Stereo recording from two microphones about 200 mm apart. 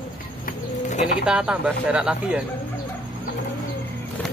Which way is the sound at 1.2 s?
5° right (ahead or behind).